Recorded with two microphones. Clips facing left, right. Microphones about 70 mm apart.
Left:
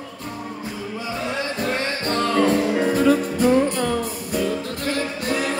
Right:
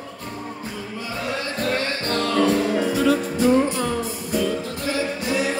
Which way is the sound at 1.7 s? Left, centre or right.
Left.